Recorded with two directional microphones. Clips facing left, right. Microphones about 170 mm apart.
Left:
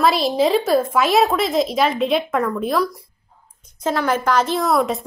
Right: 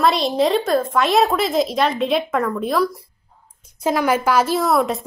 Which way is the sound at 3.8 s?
10° right (ahead or behind).